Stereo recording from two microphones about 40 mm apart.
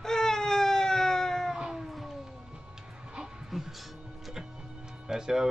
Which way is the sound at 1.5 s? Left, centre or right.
Centre.